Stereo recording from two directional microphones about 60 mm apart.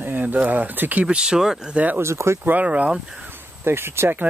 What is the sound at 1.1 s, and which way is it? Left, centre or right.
Speech, centre.